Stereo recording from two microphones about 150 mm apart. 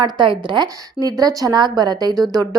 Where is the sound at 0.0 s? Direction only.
30° right (ahead or behind).